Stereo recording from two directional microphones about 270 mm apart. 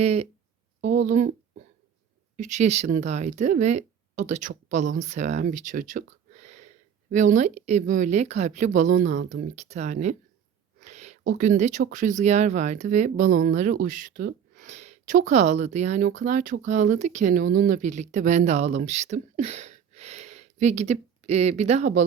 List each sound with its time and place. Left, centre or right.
0.0 s speech: right
10.8 s a sound: right
11.3 s speech: right